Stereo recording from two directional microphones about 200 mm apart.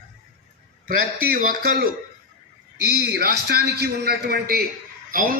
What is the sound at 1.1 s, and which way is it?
A man's voice, 45° right (ahead or behind).